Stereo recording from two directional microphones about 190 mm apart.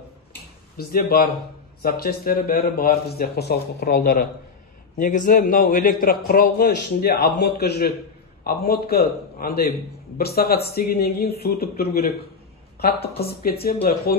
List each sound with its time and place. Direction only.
0.7 s a man's voice: 55° left (ahead or behind)